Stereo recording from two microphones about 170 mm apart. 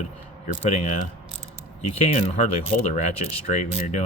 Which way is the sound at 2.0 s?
35° left (ahead or behind).